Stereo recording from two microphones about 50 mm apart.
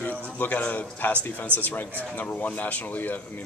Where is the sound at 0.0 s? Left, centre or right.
Left.